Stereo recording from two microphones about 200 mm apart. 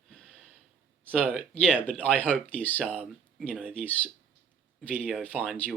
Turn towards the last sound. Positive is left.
turn(degrees=0)  # may be behind; listen again after turning